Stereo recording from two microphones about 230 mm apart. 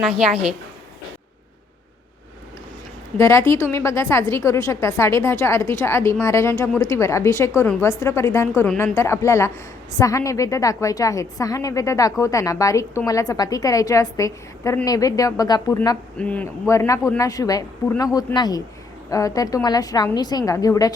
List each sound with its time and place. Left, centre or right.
3.2 s a woman's voice: centre
16.1 s a woman's voice: centre